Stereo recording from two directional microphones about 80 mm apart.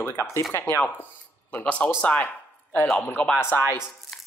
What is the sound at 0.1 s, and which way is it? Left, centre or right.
Speech, left.